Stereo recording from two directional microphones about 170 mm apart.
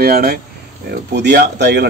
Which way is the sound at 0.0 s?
65° right (ahead or behind).